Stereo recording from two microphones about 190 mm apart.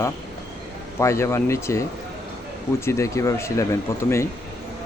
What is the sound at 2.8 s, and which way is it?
Speech, 15° left (ahead or behind).